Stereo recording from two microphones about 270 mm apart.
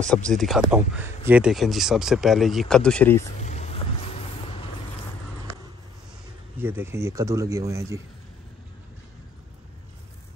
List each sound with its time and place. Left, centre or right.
0.1 s speech: centre
3.4 s music: left
6.6 s speech: centre